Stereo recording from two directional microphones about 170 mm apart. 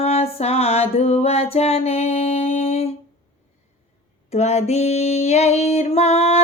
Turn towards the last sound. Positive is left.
turn(degrees=40)  # may be behind; listen again after turning